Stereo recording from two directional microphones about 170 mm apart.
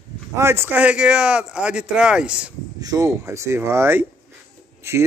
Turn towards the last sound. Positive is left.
turn(degrees=-15)  # may be behind; listen again after turning